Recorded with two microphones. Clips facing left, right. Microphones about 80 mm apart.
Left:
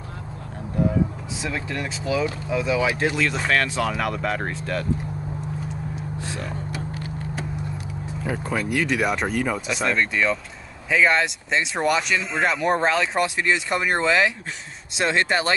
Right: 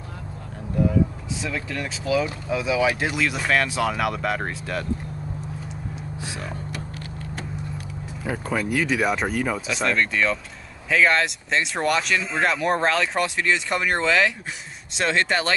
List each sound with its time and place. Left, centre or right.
1.4 s speech: centre
2.5 s speech: centre
6.2 s speech: centre
6.7 s a sound: centre
8.3 s speech: centre